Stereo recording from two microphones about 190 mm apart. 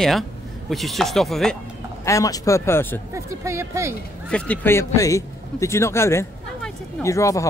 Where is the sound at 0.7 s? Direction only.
Centre (ahead or behind).